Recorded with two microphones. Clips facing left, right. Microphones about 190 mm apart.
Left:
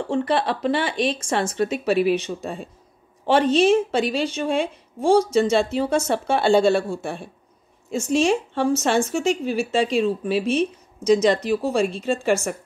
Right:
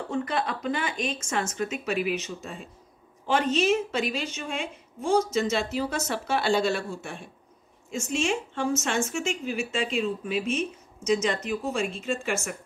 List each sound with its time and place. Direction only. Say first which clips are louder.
0.1 s speech: left 7 dB; 30° left (ahead or behind)